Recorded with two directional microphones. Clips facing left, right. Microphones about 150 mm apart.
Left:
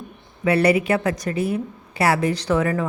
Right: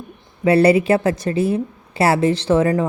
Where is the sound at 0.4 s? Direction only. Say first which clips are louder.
Right 5 dB; 30° right (ahead or behind).